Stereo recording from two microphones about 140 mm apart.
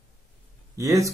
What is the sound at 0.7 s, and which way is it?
Speech, 20° right (ahead or behind).